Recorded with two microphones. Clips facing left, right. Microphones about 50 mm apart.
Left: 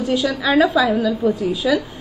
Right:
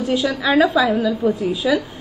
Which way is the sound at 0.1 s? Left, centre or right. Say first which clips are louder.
Even; centre.